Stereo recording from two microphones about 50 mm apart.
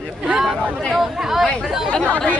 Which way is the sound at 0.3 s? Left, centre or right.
Centre.